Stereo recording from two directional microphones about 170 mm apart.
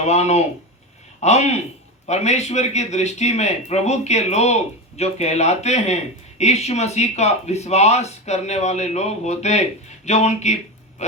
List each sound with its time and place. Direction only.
0.0 s speech: 40° left (ahead or behind)